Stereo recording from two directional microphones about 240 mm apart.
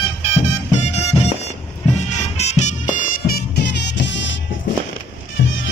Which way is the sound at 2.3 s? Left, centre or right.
Left.